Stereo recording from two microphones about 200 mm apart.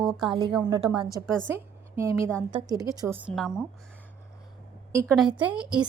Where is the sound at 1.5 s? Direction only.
15° right (ahead or behind).